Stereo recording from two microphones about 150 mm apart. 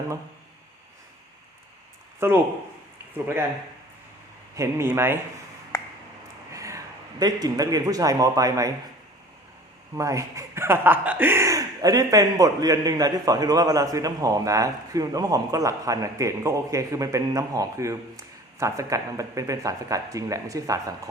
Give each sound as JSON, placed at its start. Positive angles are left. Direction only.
{"t": 2.1, "sound": "speech", "side_deg": -15}
{"t": 4.5, "sound": "speech", "side_deg": -20}
{"t": 6.5, "sound": "speech", "side_deg": -20}
{"t": 9.9, "sound": "speech", "side_deg": -20}